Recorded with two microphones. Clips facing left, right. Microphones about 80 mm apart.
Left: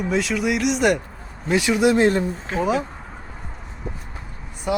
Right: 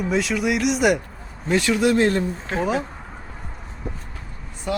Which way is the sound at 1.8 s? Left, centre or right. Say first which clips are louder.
Left 3 dB; centre.